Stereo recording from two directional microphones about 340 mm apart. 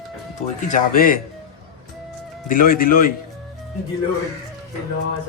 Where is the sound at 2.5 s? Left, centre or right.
Left.